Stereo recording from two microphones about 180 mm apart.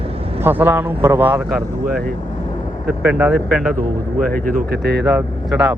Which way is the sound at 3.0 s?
5° right (ahead or behind).